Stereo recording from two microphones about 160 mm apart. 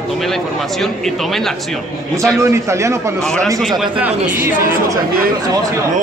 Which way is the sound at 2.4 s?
20° right (ahead or behind).